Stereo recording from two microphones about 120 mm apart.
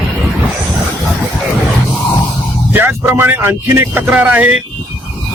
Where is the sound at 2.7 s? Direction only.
20° right (ahead or behind).